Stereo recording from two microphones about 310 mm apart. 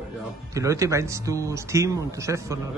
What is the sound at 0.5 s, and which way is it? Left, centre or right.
Speech, centre.